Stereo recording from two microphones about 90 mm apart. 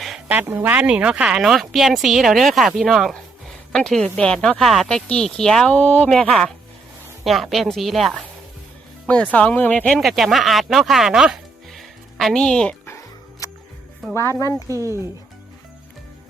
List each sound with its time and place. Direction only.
0.3 s speech: 20° right (ahead or behind); by 5.7 s 5° left (ahead or behind)
5.7 s speech: 15° left (ahead or behind)
7.3 s speech: centre (ahead or behind)
9.0 s speech: 15° left (ahead or behind)
14.1 s speech: 35° left (ahead or behind)
14.7 s speech: 35° right (ahead or behind)